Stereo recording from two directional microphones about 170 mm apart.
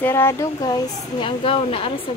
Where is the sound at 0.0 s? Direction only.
15° left (ahead or behind); by 2.0 s 30° left (ahead or behind).